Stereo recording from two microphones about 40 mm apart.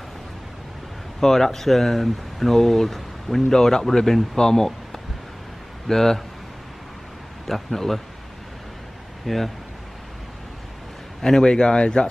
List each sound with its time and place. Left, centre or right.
1.2 s speech: centre
5.9 s speech: centre
7.4 s speech: centre
9.2 s speech: centre
11.1 s speech: centre